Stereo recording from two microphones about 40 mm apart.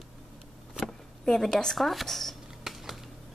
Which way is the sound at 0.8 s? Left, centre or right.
Centre.